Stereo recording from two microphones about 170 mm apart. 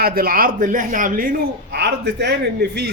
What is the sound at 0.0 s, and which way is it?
Speech, 60° right (ahead or behind).